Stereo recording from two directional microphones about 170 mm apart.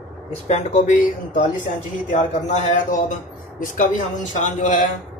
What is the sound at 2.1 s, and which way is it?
A man's voice, 45° left (ahead or behind).